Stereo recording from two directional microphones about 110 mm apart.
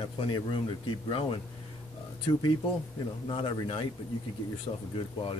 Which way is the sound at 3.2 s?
55° left (ahead or behind).